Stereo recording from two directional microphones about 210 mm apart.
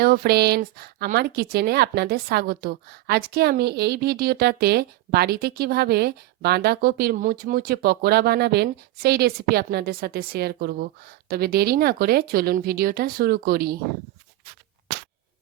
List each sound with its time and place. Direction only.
0.0 s speech: 45° right (ahead or behind)